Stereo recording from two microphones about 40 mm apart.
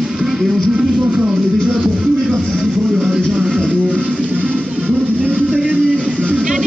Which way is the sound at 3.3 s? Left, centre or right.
Right.